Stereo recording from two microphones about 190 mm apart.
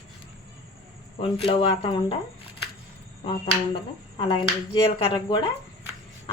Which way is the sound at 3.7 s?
25° left (ahead or behind).